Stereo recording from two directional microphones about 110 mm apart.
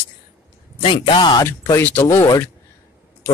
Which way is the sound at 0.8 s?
50° left (ahead or behind).